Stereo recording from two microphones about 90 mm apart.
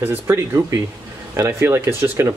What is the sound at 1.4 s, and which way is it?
Speech, 30° right (ahead or behind).